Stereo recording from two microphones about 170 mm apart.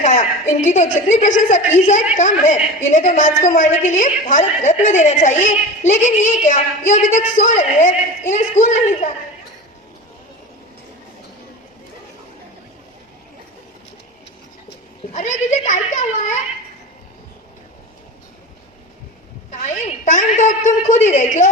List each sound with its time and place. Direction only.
0.0 s a woman's voice: 45° left (ahead or behind)
15.1 s a woman's voice: 45° left (ahead or behind)
19.6 s a woman's voice: 45° left (ahead or behind)